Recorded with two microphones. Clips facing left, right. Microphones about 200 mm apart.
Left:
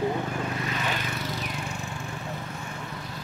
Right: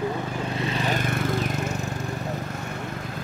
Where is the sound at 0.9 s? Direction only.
50° right (ahead or behind).